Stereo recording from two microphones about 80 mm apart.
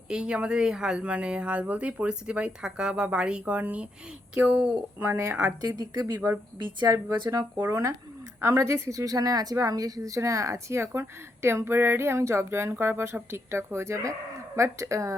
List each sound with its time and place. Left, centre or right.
0.1 s speech: centre
5.6 s speech: right
6.6 s a woman's voice: right
6.8 s speech: right
7.5 s a woman's voice: right